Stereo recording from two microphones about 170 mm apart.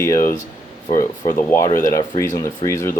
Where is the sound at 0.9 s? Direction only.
50° left (ahead or behind).